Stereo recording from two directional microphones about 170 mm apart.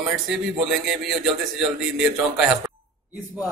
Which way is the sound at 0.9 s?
Centre (ahead or behind).